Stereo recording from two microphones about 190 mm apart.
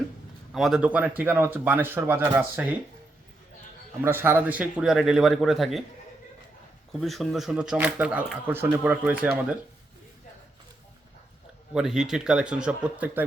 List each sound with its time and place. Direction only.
0.5 s speech: centre (ahead or behind)
4.0 s speech: 10° right (ahead or behind)
7.0 s speech: centre (ahead or behind)
11.7 s speech: 5° right (ahead or behind)